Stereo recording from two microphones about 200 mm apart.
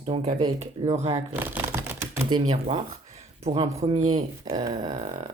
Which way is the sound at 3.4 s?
30° right (ahead or behind).